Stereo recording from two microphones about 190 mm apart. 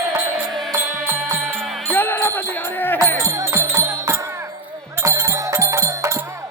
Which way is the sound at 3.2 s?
15° right (ahead or behind).